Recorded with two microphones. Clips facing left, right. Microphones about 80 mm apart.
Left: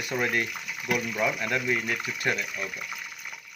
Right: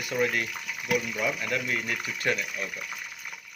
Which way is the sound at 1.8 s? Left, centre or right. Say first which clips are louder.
Left 2 dB; centre.